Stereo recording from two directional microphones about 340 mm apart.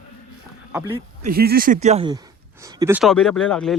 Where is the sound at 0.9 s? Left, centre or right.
Right.